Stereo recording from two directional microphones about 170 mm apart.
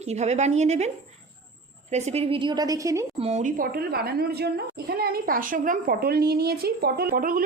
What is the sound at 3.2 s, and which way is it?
A woman's voice, 40° right (ahead or behind).